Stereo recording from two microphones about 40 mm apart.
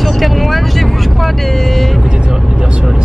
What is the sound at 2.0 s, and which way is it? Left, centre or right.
Speech, centre.